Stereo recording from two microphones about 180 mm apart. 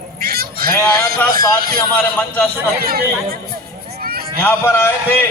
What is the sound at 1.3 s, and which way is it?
Speech, 20° left (ahead or behind).